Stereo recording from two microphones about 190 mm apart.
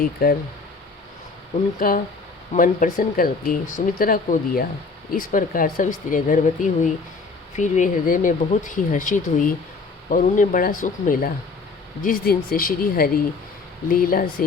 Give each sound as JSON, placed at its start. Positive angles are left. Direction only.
{"t": 0.0, "sound": "speech", "side_deg": 50}
{"t": 1.8, "sound": "speech", "side_deg": 50}